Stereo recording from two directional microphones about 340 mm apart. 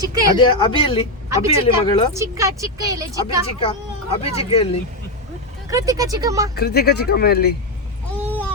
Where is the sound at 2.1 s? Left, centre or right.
Centre.